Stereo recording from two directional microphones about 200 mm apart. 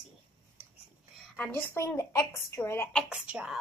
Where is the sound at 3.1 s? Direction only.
5° right (ahead or behind).